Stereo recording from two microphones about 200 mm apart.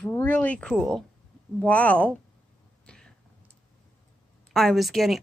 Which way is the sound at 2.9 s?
5° left (ahead or behind).